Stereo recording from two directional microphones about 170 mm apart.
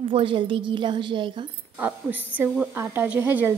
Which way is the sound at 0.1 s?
30° right (ahead or behind).